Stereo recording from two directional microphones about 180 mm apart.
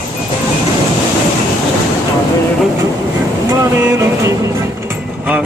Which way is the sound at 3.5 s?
15° right (ahead or behind).